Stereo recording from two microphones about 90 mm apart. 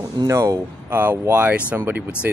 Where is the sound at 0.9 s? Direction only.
25° right (ahead or behind).